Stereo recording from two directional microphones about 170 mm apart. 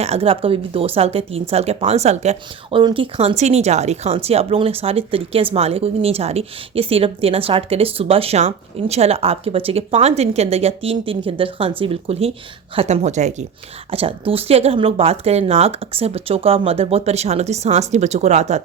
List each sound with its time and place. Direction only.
0.0 s speech: 35° right (ahead or behind)